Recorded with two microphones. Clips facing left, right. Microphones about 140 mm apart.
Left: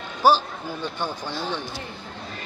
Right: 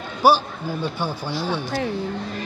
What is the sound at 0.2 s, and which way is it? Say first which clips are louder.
Speech: right 2 dB; 10° right (ahead or behind).